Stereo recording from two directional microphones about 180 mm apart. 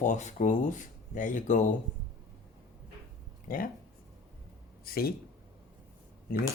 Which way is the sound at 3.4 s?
50° left (ahead or behind).